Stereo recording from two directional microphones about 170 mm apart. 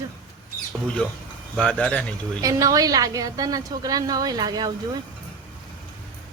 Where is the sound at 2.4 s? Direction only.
20° right (ahead or behind).